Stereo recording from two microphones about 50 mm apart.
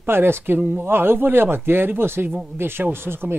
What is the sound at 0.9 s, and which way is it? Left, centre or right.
Speech, right.